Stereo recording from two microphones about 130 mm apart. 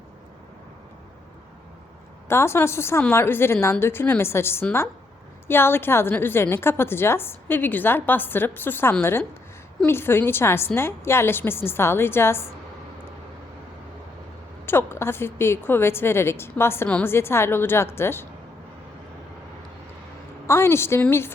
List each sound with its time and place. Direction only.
2.2 s a woman's voice: 20° left (ahead or behind)
14.7 s a woman's voice: 20° left (ahead or behind)
20.5 s a woman's voice: 20° left (ahead or behind)